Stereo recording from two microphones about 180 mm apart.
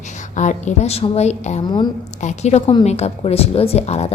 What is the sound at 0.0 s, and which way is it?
A woman's voice, 40° left (ahead or behind).